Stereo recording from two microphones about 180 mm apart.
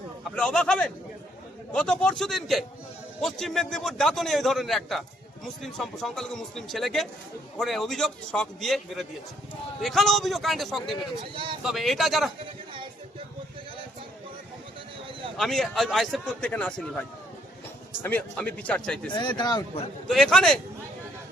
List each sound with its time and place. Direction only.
0.3 s a man's voice: 5° left (ahead or behind)
15.4 s a man's voice: centre (ahead or behind)
18.0 s a man's voice: 10° left (ahead or behind)
19.1 s speech: 25° left (ahead or behind)
20.1 s a man's voice: centre (ahead or behind)